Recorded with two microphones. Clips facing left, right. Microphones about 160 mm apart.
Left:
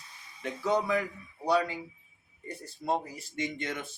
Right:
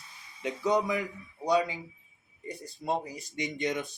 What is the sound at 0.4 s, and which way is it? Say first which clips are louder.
Speech: right 1 dB; 15° right (ahead or behind).